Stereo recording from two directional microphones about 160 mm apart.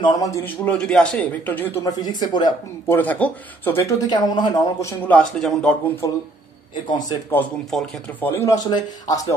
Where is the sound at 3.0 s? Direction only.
10° left (ahead or behind); by 4.9 s 25° left (ahead or behind).